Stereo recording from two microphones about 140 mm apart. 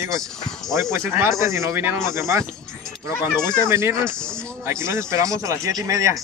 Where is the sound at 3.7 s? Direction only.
20° right (ahead or behind).